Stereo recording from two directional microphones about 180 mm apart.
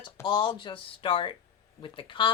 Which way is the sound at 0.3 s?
25° left (ahead or behind).